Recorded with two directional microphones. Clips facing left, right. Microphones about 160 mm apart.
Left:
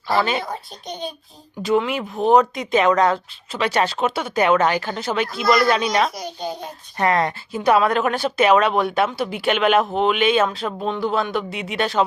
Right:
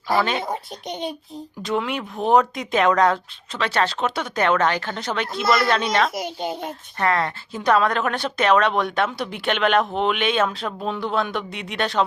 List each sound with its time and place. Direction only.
0.2 s speech: 5° left (ahead or behind)
0.4 s a child's voice: 20° right (ahead or behind)
1.6 s speech: 5° left (ahead or behind)
3.6 s speech: 10° left (ahead or behind)
6.1 s a child's voice: 20° right (ahead or behind)
7.0 s speech: 15° left (ahead or behind)